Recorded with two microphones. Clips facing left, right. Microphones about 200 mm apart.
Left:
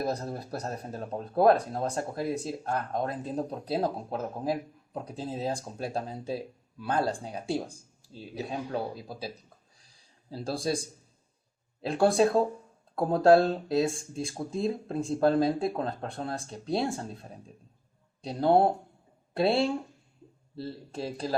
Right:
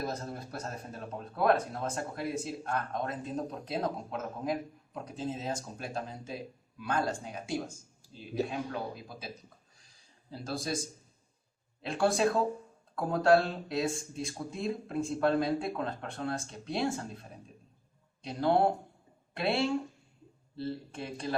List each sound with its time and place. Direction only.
0.0 s speech: 35° left (ahead or behind)
10.4 s speech: 30° left (ahead or behind)
18.2 s speech: 35° left (ahead or behind)
20.9 s speech: 35° left (ahead or behind)